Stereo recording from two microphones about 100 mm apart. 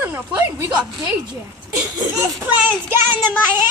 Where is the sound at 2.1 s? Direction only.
20° right (ahead or behind).